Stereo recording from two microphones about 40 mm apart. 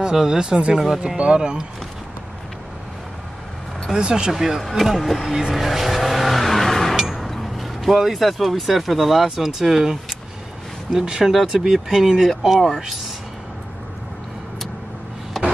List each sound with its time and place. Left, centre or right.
0.0 s speech: centre
1.0 s speech: right
4.0 s speech: centre
4.3 s speech: centre
7.0 s a sound: centre
7.2 s speech: centre
15.3 s a sound: centre